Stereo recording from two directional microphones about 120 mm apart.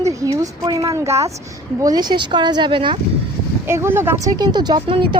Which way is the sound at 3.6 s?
20° right (ahead or behind).